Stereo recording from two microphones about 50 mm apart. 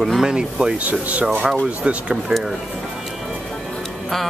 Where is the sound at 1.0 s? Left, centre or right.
Right.